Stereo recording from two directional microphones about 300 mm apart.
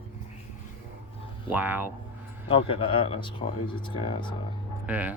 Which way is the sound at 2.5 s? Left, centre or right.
Centre.